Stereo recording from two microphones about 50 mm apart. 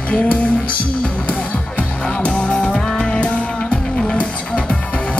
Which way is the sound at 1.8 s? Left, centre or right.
Centre.